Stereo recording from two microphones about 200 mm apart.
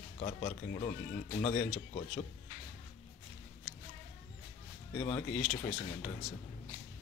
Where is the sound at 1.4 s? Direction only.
25° left (ahead or behind).